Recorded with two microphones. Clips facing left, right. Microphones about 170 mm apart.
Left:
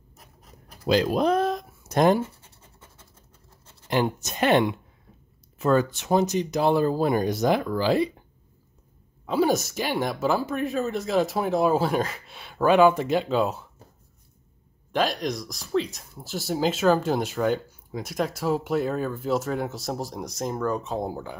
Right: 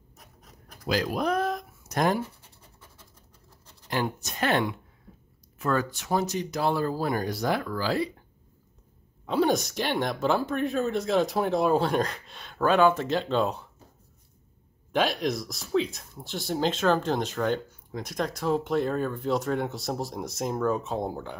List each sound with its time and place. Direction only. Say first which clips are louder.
0.8 s speech: left 5 dB; 25° left (ahead or behind)
3.9 s speech: left 5 dB; 20° left (ahead or behind)
9.2 s speech: left 2 dB; 5° left (ahead or behind)
14.9 s speech: even; centre (ahead or behind)